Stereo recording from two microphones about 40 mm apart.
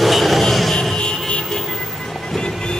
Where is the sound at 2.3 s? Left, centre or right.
Centre.